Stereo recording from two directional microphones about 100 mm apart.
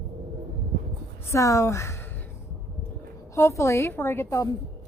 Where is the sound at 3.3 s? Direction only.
30° left (ahead or behind).